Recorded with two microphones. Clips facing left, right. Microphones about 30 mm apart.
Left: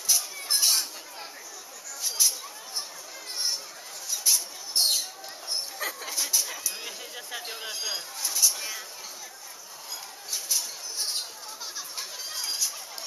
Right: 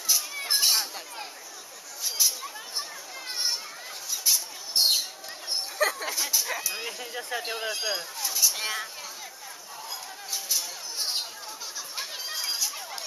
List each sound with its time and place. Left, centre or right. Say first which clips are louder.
0.3 s a sound: right 1 dB; right
4.1 s mouse: even; centre
5.8 s dog: right 8 dB; right
6.1 s dog: right 1 dB; centre
6.7 s speech: right 4 dB; centre
8.2 s speech: left 1 dB; centre
8.5 s speech: right 5 dB; right
10.3 s a sound: even; centre
12.0 s chatter: right 3 dB; centre